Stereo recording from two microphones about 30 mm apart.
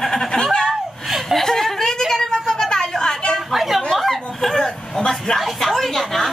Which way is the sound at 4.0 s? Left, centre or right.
Centre.